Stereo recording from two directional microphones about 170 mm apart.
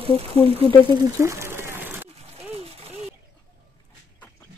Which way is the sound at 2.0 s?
40° right (ahead or behind).